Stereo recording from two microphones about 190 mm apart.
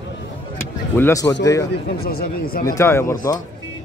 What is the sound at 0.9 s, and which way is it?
Speech, 15° left (ahead or behind).